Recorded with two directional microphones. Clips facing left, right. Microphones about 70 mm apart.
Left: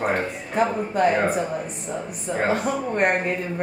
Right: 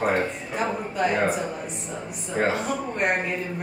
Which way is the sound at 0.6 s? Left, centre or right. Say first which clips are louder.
Left 5 dB; left.